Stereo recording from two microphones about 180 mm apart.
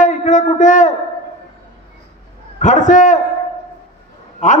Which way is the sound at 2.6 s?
45° left (ahead or behind).